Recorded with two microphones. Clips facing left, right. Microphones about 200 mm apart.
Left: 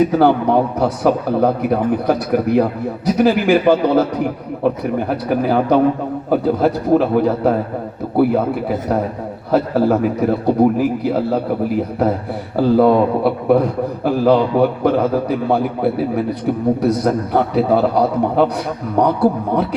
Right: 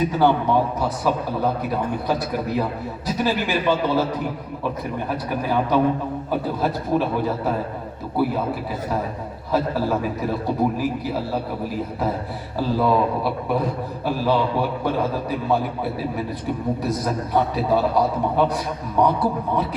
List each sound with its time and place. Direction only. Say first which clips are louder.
0.2 s a man's voice: left 5 dB; 60° left (ahead or behind)
9.5 s a man's voice: left 7 dB; 60° left (ahead or behind)
12.5 s a man's voice: left 8 dB; 60° left (ahead or behind)